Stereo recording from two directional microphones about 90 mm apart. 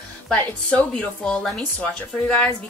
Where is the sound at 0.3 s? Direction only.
10° left (ahead or behind).